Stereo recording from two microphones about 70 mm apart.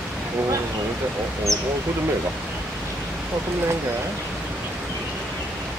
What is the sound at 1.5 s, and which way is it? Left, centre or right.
Speech, right.